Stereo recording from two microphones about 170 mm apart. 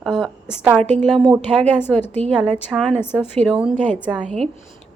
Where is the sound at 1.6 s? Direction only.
10° left (ahead or behind); by 4.3 s 5° right (ahead or behind).